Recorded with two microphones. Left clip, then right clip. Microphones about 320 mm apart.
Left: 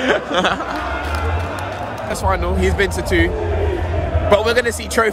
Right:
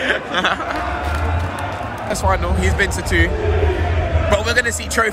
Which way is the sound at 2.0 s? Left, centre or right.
Centre.